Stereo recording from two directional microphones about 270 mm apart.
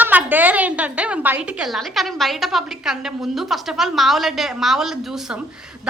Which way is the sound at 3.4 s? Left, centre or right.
Centre.